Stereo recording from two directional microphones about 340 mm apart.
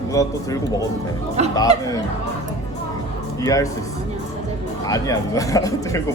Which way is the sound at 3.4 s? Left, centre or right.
Centre.